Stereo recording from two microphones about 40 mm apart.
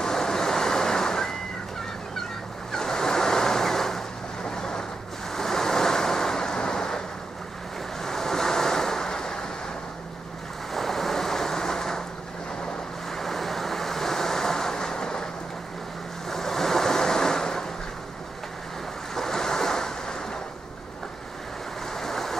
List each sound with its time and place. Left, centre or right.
0.0 s waves: centre
2.7 s waves: centre
4.5 s a sound: centre
5.3 s waves: centre
8.0 s waves: centre
10.7 s waves: centre
13.1 s waves: centre
16.3 s waves: centre
19.1 s waves: centre
21.9 s a sound: centre